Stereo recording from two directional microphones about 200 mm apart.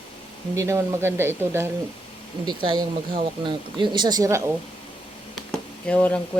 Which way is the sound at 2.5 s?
25° right (ahead or behind).